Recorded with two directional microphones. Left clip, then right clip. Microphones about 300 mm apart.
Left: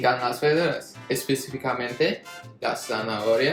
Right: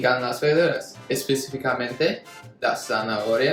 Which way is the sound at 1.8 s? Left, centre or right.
Centre.